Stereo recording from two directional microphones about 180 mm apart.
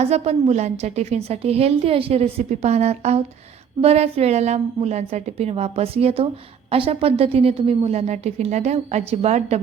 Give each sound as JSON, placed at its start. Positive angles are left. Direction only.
{"t": 0.0, "sound": "a woman's voice", "side_deg": -35}